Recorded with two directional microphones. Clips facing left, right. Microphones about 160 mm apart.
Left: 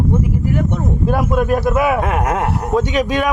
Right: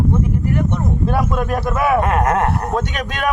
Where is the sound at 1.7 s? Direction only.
5° left (ahead or behind).